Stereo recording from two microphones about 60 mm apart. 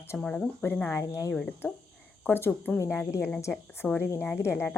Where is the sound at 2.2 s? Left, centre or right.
Left.